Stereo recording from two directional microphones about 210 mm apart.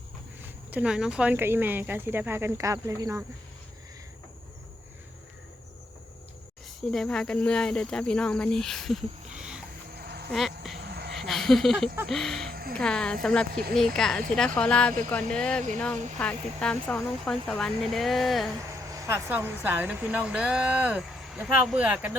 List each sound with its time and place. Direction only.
0.4 s speech: 5° right (ahead or behind)
6.9 s speech: 5° left (ahead or behind)
9.9 s a sound: 50° right (ahead or behind)
10.3 s speech: centre (ahead or behind)
10.8 s cricket: 50° right (ahead or behind)
11.1 s a sound: centre (ahead or behind)
12.0 s speech: centre (ahead or behind)
12.5 s music: 45° right (ahead or behind)
12.7 s speech: 5° left (ahead or behind)
13.5 s speech: 45° right (ahead or behind)
13.7 s speech: centre (ahead or behind)
18.9 s speech: 15° right (ahead or behind)